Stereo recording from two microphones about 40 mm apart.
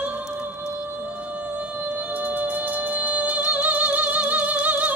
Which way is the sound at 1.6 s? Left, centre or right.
Right.